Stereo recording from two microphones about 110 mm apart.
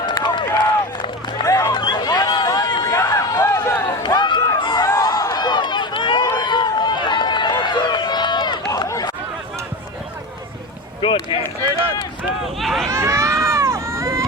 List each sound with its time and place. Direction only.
0.0 s run: 45° left (ahead or behind)
1.5 s run: 25° left (ahead or behind)
1.7 s run: 40° left (ahead or behind)
2.7 s a sound: 35° left (ahead or behind)
4.0 s run: 45° left (ahead or behind)
8.7 s a sound: 35° left (ahead or behind)
11.0 s run: 50° left (ahead or behind)
12.5 s run: centre (ahead or behind)
12.9 s run: 25° right (ahead or behind)